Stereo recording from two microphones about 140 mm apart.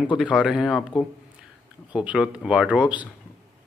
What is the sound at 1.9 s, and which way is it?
Speech, 10° right (ahead or behind).